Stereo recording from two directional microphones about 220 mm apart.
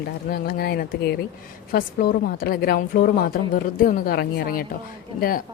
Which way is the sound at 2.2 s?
45° left (ahead or behind).